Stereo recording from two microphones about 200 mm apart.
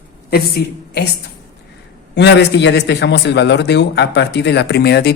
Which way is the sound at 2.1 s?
60° left (ahead or behind).